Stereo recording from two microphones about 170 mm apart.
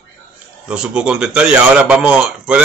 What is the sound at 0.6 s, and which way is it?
A man's voice, 5° right (ahead or behind).